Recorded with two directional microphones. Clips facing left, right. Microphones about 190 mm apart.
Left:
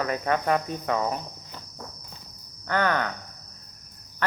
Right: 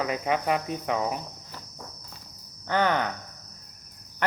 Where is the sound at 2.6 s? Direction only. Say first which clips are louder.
Even; 20° right (ahead or behind).